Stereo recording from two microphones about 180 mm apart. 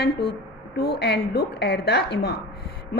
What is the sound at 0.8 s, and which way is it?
A woman's voice, 60° left (ahead or behind).